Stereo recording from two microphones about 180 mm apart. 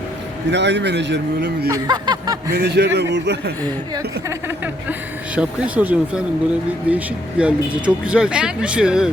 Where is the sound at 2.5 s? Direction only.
65° right (ahead or behind).